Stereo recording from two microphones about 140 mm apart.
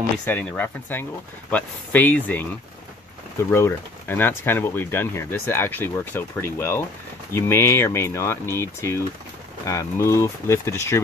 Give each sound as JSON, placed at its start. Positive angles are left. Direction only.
{"t": 0.2, "sound": "speech", "side_deg": 10}
{"t": 3.5, "sound": "speech", "side_deg": 15}